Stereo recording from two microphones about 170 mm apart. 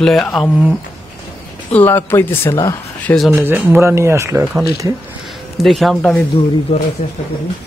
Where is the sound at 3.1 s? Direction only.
5° left (ahead or behind).